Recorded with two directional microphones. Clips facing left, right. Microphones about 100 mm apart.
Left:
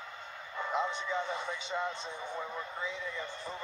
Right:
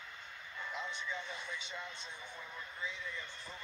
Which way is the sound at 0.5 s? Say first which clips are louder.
Left 10 dB; 85° left.